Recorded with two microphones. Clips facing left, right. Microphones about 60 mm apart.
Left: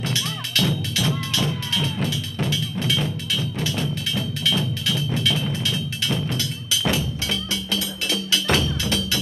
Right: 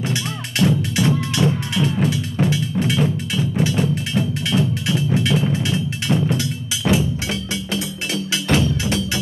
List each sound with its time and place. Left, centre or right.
0.1 s music: right
7.7 s wood block: right